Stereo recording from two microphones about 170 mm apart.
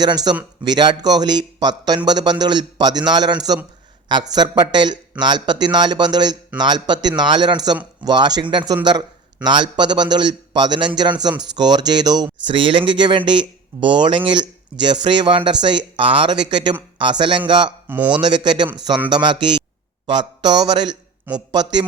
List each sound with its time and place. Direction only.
0.0 s a man's voice: 25° right (ahead or behind)
17.8 s speech: 10° right (ahead or behind)
18.2 s a man's voice: 25° right (ahead or behind)